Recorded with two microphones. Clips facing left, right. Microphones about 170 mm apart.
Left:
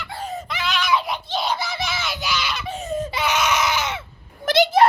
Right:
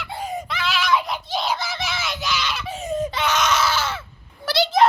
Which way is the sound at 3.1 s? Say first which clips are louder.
Left 1 dB; 10° left (ahead or behind).